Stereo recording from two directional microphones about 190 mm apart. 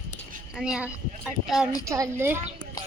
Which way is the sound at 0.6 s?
5° right (ahead or behind).